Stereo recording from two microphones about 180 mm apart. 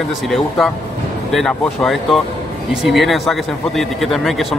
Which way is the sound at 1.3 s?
Centre (ahead or behind).